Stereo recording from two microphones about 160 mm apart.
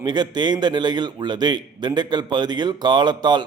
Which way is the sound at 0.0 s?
25° right (ahead or behind).